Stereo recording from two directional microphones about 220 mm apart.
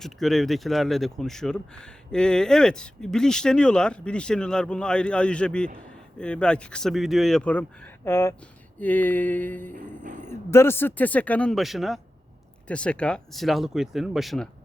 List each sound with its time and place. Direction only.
0.0 s speech: centre (ahead or behind)
9.7 s a sound: 35° right (ahead or behind)
10.2 s speech: 10° left (ahead or behind)